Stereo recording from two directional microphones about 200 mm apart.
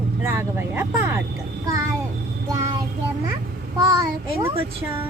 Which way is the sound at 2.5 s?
15° right (ahead or behind).